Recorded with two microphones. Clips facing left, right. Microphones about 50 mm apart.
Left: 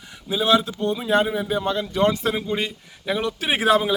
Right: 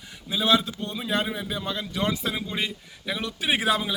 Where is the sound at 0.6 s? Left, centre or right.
Left.